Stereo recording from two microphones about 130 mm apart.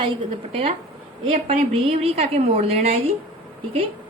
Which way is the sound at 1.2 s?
45° right (ahead or behind).